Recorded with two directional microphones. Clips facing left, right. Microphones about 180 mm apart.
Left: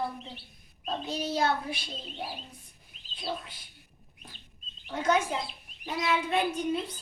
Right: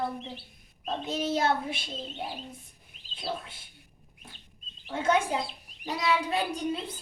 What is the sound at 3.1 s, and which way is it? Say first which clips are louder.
Speech: right 1 dB; 25° right (ahead or behind).